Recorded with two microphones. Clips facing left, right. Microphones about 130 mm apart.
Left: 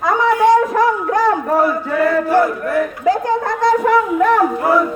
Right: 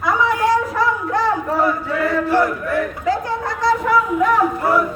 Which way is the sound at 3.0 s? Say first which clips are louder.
Left 5 dB; 50° left (ahead or behind).